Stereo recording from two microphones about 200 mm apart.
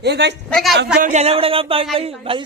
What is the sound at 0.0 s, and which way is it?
Speech, 55° right (ahead or behind).